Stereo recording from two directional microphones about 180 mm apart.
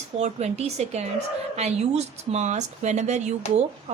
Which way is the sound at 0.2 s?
35° right (ahead or behind).